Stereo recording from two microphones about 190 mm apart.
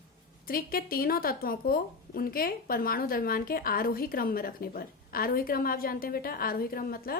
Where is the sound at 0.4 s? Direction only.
50° left (ahead or behind).